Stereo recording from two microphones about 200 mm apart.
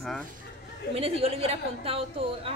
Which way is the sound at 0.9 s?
30° right (ahead or behind).